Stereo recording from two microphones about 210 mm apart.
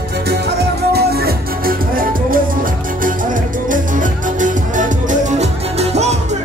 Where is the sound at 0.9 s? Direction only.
45° right (ahead or behind); by 6.1 s 30° right (ahead or behind).